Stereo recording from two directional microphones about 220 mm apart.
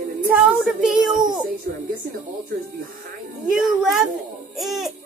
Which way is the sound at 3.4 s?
Centre (ahead or behind).